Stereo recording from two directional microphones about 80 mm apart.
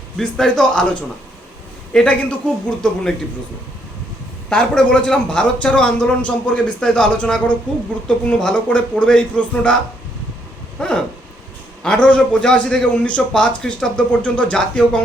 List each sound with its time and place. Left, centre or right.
0.2 s a man's voice: centre
4.4 s a man's voice: centre
10.8 s a sound: centre
11.8 s a man's voice: centre